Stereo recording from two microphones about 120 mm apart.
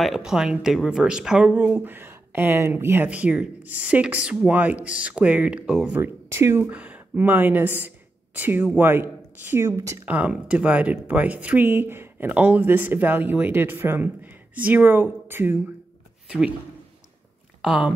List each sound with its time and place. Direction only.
0.0 s speech: 5° right (ahead or behind)
5.9 s speech: 20° right (ahead or behind)
10.0 s speech: 10° right (ahead or behind)
16.3 s a man's voice: 10° right (ahead or behind)
17.6 s speech: 5° right (ahead or behind)